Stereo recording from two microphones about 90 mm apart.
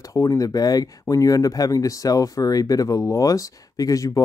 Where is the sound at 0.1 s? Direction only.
35° left (ahead or behind).